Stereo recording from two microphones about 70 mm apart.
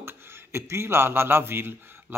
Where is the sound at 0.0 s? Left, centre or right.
Right.